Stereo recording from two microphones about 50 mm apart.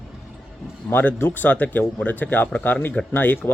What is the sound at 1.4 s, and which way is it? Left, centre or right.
Speech, left.